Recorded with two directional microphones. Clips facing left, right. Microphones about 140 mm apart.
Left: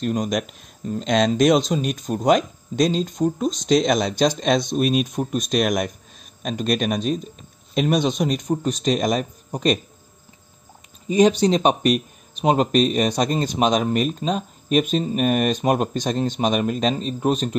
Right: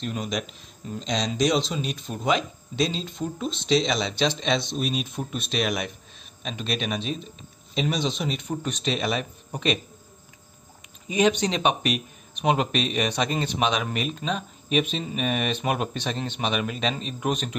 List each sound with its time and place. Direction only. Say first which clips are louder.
0.0 s speech: left 7 dB; 45° left (ahead or behind)
11.1 s speech: left 6 dB; 35° left (ahead or behind)